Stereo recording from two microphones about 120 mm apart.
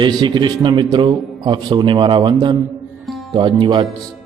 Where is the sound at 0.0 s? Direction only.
40° right (ahead or behind).